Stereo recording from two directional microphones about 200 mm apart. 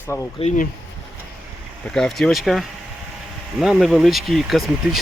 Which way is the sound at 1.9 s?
Centre (ahead or behind).